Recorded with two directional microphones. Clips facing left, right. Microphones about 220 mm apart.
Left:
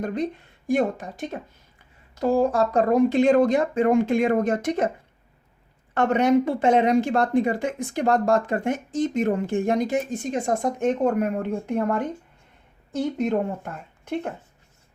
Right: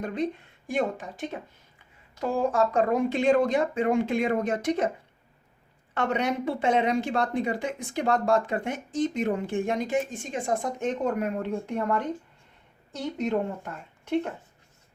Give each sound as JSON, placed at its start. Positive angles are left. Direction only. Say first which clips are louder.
{"t": 0.0, "sound": "speech", "louder": "left 3 dB", "side_deg": 40}
{"t": 5.9, "sound": "speech", "louder": "left 8 dB", "side_deg": 50}